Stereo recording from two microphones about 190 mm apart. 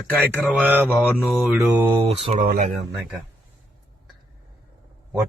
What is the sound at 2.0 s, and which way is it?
Speech, 30° right (ahead or behind).